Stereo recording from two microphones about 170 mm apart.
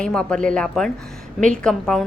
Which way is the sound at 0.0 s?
5° left (ahead or behind).